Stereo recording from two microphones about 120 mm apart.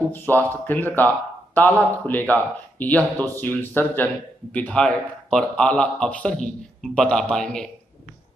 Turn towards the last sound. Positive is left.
turn(degrees=5)  # may be behind; listen again after turning